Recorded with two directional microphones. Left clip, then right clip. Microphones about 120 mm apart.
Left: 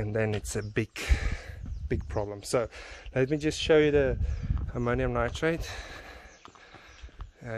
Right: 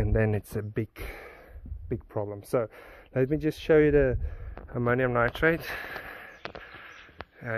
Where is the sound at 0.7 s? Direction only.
40° left (ahead or behind).